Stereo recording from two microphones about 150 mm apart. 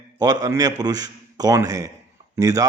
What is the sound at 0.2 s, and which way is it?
A man's voice, 25° right (ahead or behind).